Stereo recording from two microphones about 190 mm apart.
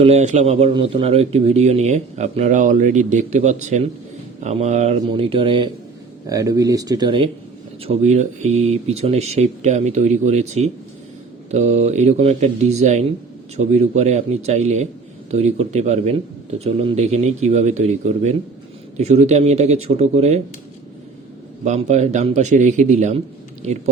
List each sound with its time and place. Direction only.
0.0 s a man's voice: 35° right (ahead or behind)
7.9 s a man's voice: 35° right (ahead or behind)
21.6 s a man's voice: 35° right (ahead or behind)